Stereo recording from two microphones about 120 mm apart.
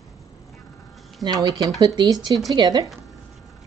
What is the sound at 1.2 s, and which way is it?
Speech, 30° right (ahead or behind).